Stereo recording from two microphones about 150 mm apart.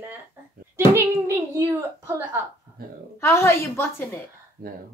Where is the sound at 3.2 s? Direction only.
20° left (ahead or behind).